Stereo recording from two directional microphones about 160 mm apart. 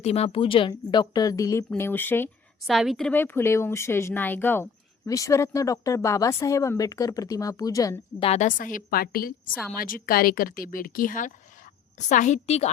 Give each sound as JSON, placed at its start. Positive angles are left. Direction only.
{"t": 0.0, "sound": "a woman's voice", "side_deg": 40}
{"t": 2.6, "sound": "a woman's voice", "side_deg": 0}
{"t": 3.1, "sound": "speech", "side_deg": 10}
{"t": 8.2, "sound": "a woman's voice", "side_deg": 45}